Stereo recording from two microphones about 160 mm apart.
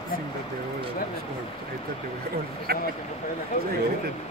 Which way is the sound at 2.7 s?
75° right (ahead or behind).